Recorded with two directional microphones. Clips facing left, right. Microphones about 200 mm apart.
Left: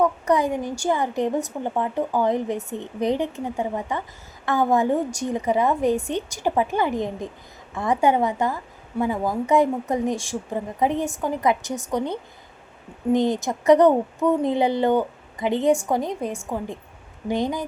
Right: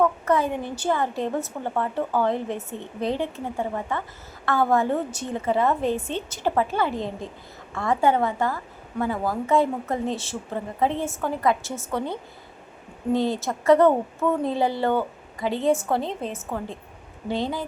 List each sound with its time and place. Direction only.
0.0 s a woman's voice: 15° left (ahead or behind)